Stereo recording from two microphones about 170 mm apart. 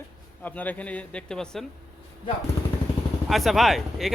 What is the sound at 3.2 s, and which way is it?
Speech, centre (ahead or behind).